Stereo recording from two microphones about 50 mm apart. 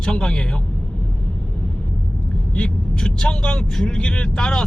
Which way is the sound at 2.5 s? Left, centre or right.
Centre.